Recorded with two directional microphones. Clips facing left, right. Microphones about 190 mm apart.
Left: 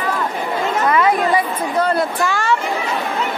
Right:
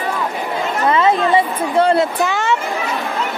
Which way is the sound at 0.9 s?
25° right (ahead or behind).